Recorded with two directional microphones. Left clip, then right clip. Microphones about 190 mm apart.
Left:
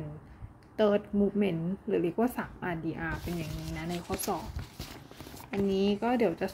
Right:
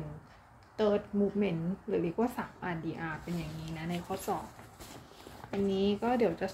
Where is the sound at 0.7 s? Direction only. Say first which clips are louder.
Left 3 dB; 40° left (ahead or behind).